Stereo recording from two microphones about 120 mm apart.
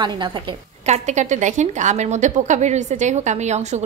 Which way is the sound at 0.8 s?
75° right (ahead or behind).